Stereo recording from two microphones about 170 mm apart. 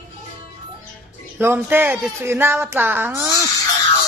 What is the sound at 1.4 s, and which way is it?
Speech, 10° right (ahead or behind).